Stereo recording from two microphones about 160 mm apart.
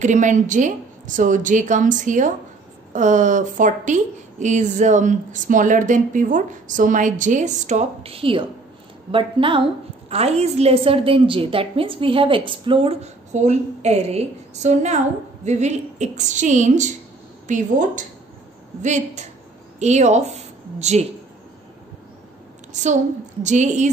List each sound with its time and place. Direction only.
0.0 s a woman's voice: 50° right (ahead or behind)
22.7 s a woman's voice: 50° right (ahead or behind)